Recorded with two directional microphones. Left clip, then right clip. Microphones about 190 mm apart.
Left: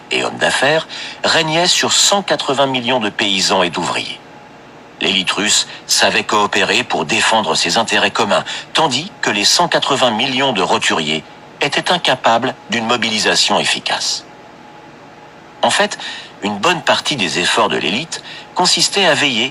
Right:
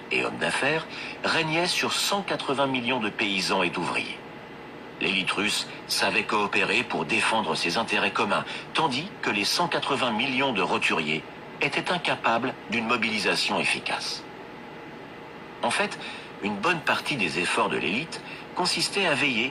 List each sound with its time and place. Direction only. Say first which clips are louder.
0.1 s a man's voice: left 10 dB; 40° left (ahead or behind)
15.6 s a man's voice: left 12 dB; 40° left (ahead or behind)